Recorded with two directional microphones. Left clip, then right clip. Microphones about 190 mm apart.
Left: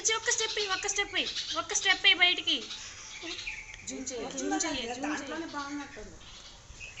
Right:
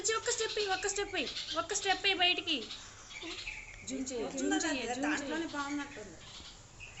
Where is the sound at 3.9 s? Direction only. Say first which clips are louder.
Even; 15° right (ahead or behind).